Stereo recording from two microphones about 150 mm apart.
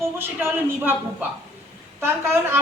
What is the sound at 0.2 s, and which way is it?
Speech, 15° right (ahead or behind).